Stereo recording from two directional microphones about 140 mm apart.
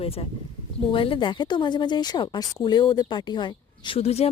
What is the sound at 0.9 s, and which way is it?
Speech, 40° left (ahead or behind).